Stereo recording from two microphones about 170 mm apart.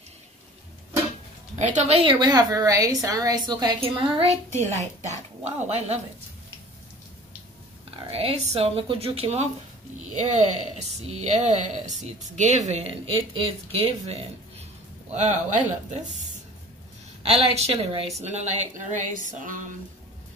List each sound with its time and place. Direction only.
1.6 s a woman's voice: 45° right (ahead or behind); by 3.9 s 25° right (ahead or behind)
4.2 s a woman's voice: 15° left (ahead or behind)
4.6 s speech: 40° right (ahead or behind)
7.9 s speech: 35° right (ahead or behind); by 19.7 s 50° right (ahead or behind)